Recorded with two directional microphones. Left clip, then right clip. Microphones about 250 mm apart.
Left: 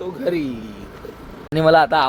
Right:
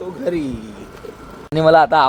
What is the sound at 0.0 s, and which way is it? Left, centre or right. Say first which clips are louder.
A man's voice: even; centre.